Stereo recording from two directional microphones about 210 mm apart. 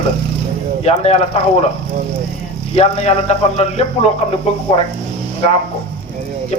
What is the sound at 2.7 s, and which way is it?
A man's voice, 30° left (ahead or behind).